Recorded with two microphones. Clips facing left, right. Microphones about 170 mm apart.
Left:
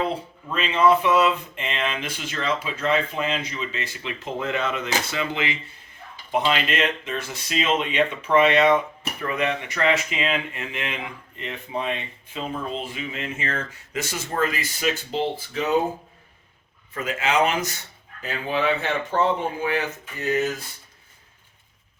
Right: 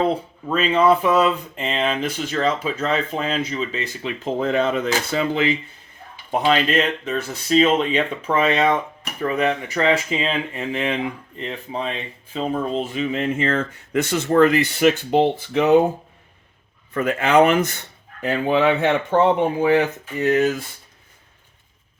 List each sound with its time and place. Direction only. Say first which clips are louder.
0.4 s speech: right 3 dB; 40° right (ahead or behind)
13.5 s speech: right 8 dB; 60° right (ahead or behind)
16.9 s speech: right 7 dB; 60° right (ahead or behind)